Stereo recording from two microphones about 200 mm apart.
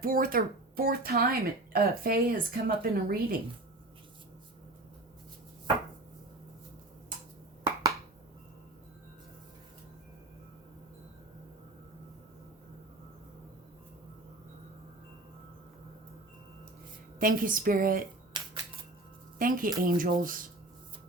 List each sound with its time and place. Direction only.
0.0 s speech: 45° right (ahead or behind)
7.6 s a sound: 20° right (ahead or behind)
17.2 s speech: 45° right (ahead or behind)
19.4 s speech: 45° right (ahead or behind)